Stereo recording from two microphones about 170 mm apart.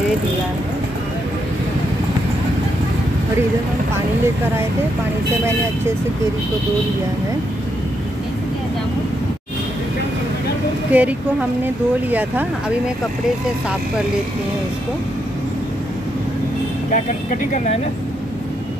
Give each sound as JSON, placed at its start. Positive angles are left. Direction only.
{"t": 10.9, "sound": "speech", "side_deg": -10}
{"t": 16.9, "sound": "speech", "side_deg": 50}